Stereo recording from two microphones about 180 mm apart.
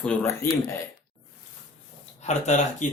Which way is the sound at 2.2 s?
40° left (ahead or behind).